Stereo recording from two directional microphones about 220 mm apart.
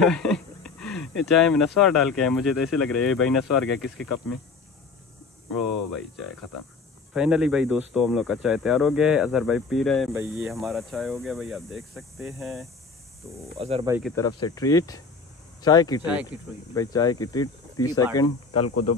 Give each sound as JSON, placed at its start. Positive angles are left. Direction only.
{"t": 0.0, "sound": "speech", "side_deg": 5}
{"t": 7.2, "sound": "speech", "side_deg": -5}
{"t": 13.6, "sound": "speech", "side_deg": -25}
{"t": 14.1, "sound": "speech", "side_deg": 15}
{"t": 18.5, "sound": "speech", "side_deg": 90}